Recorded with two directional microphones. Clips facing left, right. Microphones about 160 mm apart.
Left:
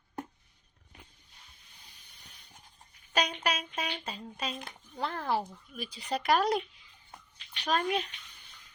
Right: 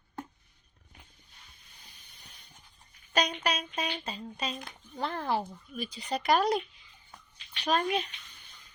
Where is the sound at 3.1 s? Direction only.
5° left (ahead or behind).